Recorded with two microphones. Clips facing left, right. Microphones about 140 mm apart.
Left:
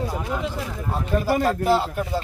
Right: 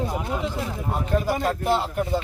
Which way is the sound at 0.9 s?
Centre (ahead or behind).